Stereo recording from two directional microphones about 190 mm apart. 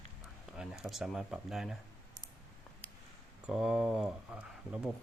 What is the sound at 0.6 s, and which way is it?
Speech, centre (ahead or behind).